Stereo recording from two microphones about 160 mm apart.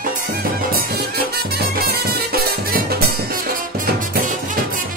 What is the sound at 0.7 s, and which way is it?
Music, 75° right (ahead or behind).